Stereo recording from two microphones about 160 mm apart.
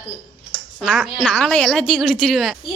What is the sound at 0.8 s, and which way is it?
A woman's voice, centre (ahead or behind).